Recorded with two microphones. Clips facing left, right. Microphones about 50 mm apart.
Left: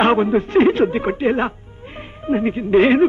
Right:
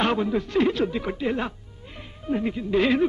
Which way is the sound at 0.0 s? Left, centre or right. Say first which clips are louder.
Left 8 dB; left.